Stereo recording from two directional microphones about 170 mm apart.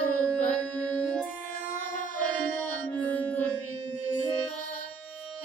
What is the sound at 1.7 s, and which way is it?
Music, 55° left (ahead or behind).